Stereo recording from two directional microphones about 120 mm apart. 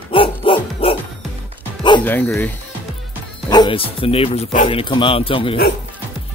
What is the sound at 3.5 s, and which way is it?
Speech, 35° left (ahead or behind).